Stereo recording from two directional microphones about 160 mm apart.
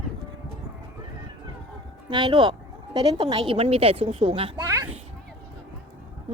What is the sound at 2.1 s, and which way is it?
A woman's voice, 30° right (ahead or behind).